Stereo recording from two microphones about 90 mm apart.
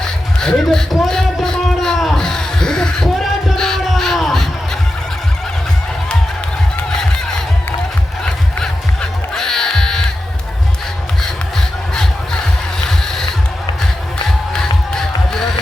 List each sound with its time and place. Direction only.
0.0 s music: 5° left (ahead or behind)
8.2 s music: 10° left (ahead or behind)
12.8 s music: 5° left (ahead or behind)
14.9 s music: 5° left (ahead or behind)